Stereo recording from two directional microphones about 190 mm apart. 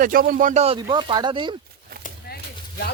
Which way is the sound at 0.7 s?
25° right (ahead or behind).